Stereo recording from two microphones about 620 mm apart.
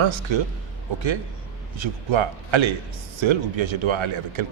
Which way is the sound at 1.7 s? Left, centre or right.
Right.